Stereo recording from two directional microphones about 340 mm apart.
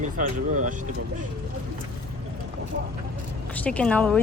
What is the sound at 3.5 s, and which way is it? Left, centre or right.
Speech, centre.